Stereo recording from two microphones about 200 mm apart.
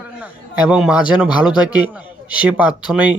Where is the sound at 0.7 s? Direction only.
5° right (ahead or behind).